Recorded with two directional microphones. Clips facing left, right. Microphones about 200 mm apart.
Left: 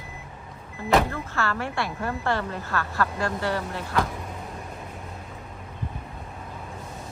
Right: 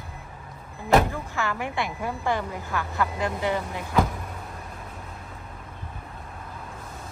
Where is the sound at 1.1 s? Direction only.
15° right (ahead or behind).